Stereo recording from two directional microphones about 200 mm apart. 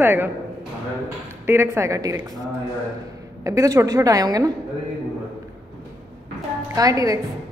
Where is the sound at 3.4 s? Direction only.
15° right (ahead or behind).